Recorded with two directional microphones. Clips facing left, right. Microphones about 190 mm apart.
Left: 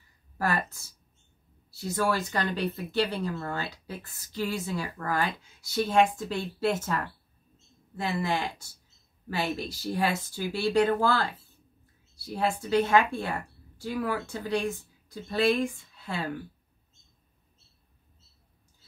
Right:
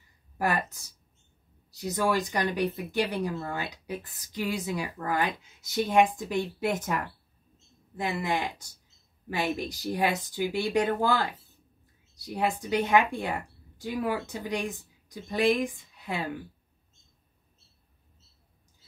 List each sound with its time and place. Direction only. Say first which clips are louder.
0.4 s a woman's voice: right 1 dB; 15° right (ahead or behind)